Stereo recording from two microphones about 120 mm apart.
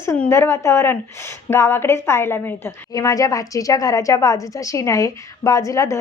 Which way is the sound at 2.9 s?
30° left (ahead or behind).